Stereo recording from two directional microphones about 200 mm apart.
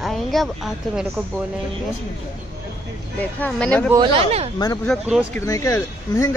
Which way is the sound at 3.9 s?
25° right (ahead or behind).